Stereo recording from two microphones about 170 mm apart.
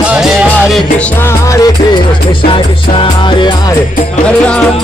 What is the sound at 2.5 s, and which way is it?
Music, 30° left (ahead or behind).